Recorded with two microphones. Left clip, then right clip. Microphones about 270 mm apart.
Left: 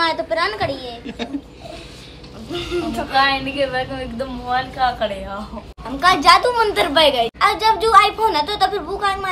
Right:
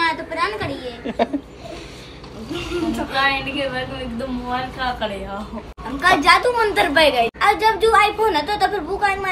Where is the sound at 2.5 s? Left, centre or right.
Centre.